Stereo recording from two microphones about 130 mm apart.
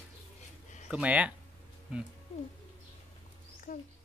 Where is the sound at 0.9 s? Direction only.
10° right (ahead or behind).